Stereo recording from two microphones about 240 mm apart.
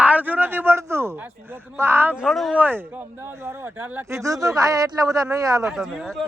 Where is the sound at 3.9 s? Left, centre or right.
Centre.